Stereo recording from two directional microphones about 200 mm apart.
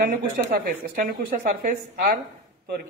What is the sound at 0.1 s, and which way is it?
Speech, 45° right (ahead or behind).